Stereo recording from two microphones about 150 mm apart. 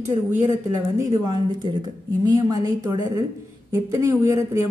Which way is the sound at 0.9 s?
25° right (ahead or behind).